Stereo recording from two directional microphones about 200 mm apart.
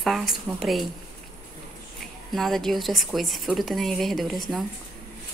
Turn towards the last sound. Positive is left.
turn(degrees=0)  # may be behind; listen again after turning